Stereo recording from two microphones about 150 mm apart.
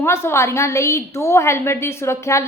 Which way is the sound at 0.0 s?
15° left (ahead or behind).